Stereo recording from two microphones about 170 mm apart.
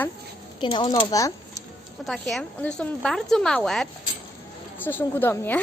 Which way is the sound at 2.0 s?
Centre (ahead or behind).